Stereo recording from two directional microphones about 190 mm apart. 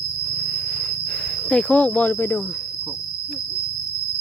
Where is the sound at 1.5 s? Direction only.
5° left (ahead or behind).